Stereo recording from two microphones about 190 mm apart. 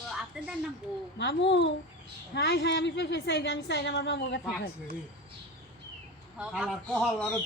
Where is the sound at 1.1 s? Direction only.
70° left (ahead or behind).